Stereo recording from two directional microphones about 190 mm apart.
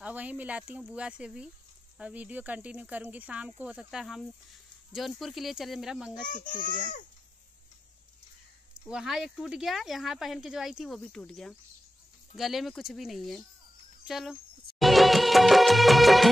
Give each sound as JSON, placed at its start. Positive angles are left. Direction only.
{"t": 0.0, "sound": "speech", "side_deg": -10}
{"t": 6.2, "sound": "a child's voice", "side_deg": 45}
{"t": 8.8, "sound": "speech", "side_deg": -5}
{"t": 14.0, "sound": "music of bollywood", "side_deg": 0}